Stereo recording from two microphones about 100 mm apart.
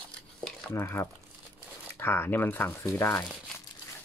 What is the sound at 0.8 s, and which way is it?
Speech, 20° left (ahead or behind).